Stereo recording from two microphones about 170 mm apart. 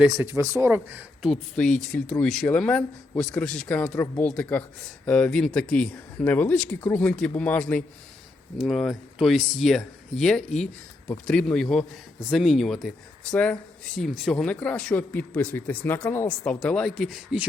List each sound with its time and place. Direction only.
0.0 s speech: 15° right (ahead or behind)
1.3 s speech: 5° left (ahead or behind)